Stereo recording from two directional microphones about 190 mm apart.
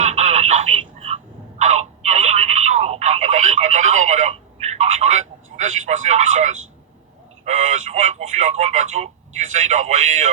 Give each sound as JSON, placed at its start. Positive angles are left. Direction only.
{"t": 0.0, "sound": "telephone", "side_deg": -35}